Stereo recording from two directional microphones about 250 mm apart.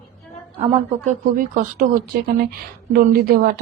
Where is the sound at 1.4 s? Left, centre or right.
Right.